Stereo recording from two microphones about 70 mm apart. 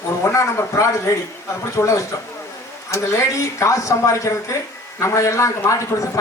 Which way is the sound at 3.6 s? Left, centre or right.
Left.